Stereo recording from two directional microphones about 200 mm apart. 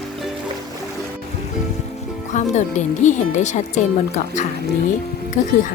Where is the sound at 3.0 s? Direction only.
35° left (ahead or behind).